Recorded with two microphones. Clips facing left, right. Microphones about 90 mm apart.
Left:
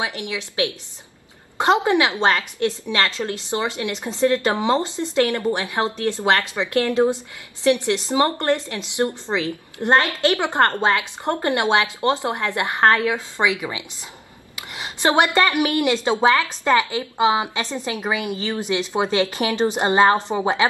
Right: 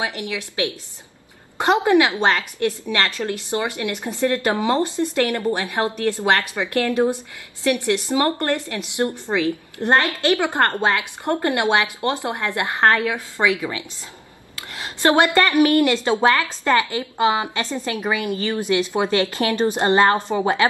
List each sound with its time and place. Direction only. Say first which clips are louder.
0.0 s a woman's voice: right 1 dB; 20° left (ahead or behind)
1.9 s a woman's voice: right 2 dB; 20° left (ahead or behind)